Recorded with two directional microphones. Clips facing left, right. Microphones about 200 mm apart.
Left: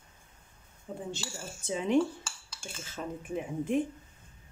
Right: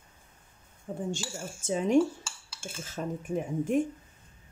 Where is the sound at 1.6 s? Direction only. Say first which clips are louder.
Right 3 dB; 45° right (ahead or behind).